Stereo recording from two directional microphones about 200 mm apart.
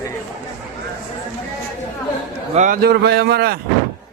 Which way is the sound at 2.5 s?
40° right (ahead or behind).